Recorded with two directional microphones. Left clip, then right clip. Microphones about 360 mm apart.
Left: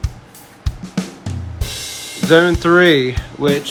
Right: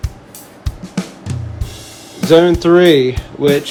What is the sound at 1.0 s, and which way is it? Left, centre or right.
Music, centre.